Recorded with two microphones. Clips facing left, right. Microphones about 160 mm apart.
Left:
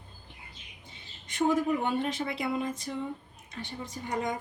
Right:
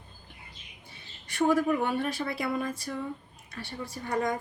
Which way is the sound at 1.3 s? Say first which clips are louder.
Right 2 dB; 20° left (ahead or behind).